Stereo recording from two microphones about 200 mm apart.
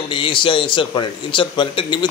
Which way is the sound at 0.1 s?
25° left (ahead or behind).